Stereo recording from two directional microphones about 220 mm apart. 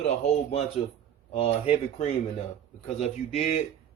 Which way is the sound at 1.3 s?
25° left (ahead or behind).